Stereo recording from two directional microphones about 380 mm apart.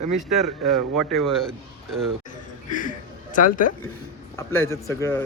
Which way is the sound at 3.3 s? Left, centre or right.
Left.